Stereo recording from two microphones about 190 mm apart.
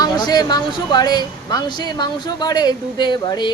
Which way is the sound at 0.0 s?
20° left (ahead or behind).